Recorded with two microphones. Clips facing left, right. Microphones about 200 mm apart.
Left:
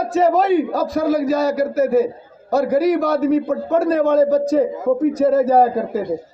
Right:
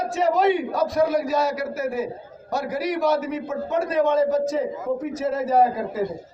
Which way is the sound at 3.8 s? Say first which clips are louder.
Left 4 dB; 60° left (ahead or behind).